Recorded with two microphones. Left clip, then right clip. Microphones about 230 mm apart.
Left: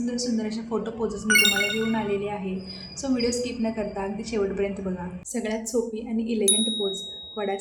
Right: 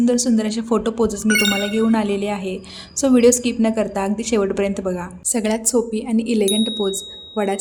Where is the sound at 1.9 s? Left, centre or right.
Right.